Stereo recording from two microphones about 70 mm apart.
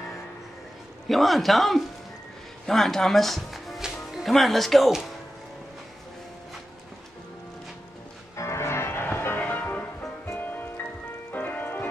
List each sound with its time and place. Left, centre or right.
1.0 s speech: centre
8.4 s music: left
9.4 s music: left